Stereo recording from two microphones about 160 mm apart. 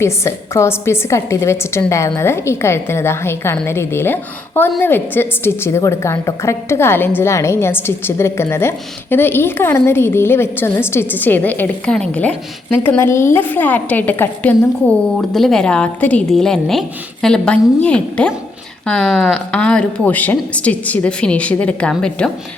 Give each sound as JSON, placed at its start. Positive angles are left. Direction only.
{"t": 0.0, "sound": "a woman's voice", "side_deg": 15}